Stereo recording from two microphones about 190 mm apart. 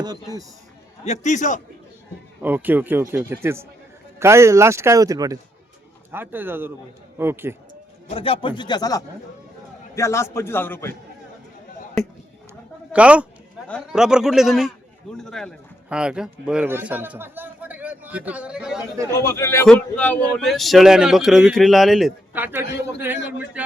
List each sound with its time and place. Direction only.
0.0 s speech: 20° right (ahead or behind)
1.0 s a man's voice: 40° left (ahead or behind)
2.4 s a man's voice: 10° right (ahead or behind)
8.1 s a man's voice: 30° left (ahead or behind); by 10.9 s 10° left (ahead or behind)
12.0 s a man's voice: centre (ahead or behind)
19.2 s a man's voice: 15° left (ahead or behind); by 23.6 s 10° right (ahead or behind)